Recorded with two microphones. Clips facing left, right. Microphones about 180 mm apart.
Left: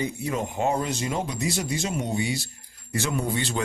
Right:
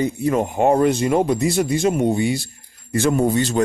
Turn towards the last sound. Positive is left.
turn(degrees=-45)  # may be behind; listen again after turning